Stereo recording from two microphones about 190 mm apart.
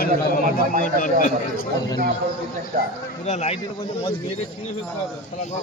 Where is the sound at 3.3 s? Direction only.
35° left (ahead or behind).